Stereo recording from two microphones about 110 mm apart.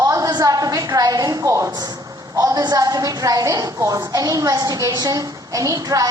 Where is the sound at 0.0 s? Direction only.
30° right (ahead or behind).